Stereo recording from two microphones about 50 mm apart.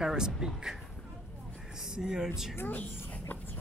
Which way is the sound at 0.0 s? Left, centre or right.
Centre.